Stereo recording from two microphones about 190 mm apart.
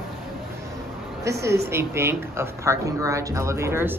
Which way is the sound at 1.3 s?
15° right (ahead or behind).